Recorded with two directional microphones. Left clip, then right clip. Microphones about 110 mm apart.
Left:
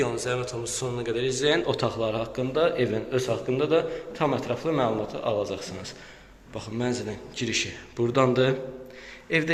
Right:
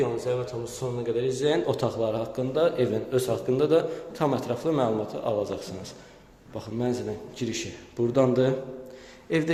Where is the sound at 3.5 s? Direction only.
40° right (ahead or behind); by 8.5 s 20° right (ahead or behind).